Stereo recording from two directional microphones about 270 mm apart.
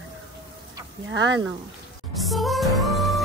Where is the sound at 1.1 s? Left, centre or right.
Right.